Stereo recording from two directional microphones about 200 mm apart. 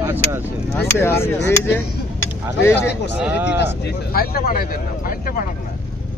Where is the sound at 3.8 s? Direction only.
50° left (ahead or behind).